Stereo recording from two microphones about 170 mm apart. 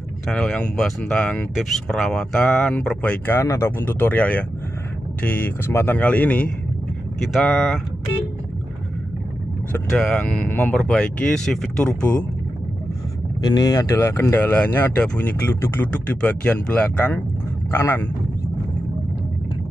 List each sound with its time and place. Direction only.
0.3 s speech: 5° left (ahead or behind)
9.7 s speech: 5° left (ahead or behind)
13.4 s a man's voice: 25° left (ahead or behind)